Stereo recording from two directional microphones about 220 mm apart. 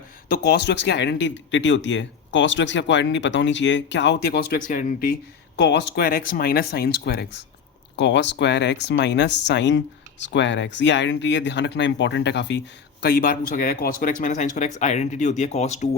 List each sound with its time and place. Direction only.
0.3 s speech: 50° left (ahead or behind)
5.5 s speech: 50° left (ahead or behind); by 15.9 s 30° left (ahead or behind)